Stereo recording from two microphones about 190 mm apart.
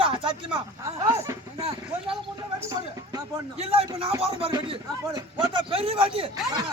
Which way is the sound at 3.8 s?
20° right (ahead or behind).